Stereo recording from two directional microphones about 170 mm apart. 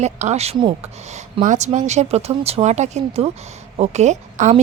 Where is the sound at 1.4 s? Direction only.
45° right (ahead or behind).